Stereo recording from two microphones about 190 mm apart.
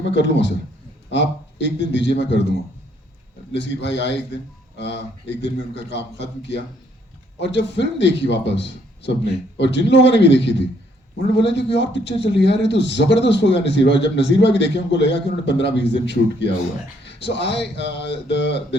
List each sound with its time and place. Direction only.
0.1 s a man's voice: 65° left (ahead or behind)
3.5 s a man's voice: 65° left (ahead or behind)
7.3 s a man's voice: 65° left (ahead or behind)